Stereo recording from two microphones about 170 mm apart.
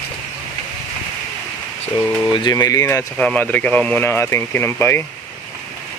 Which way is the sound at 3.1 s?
5° left (ahead or behind).